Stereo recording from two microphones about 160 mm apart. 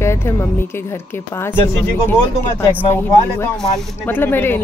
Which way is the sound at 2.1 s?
15° left (ahead or behind).